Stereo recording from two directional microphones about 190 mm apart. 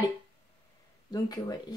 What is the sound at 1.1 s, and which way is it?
Speech, 20° left (ahead or behind).